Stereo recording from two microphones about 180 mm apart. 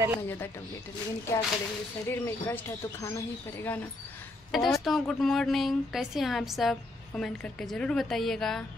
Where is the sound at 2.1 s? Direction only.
15° left (ahead or behind).